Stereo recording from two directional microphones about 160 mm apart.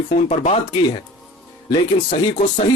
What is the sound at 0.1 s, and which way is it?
Speech, 45° left (ahead or behind).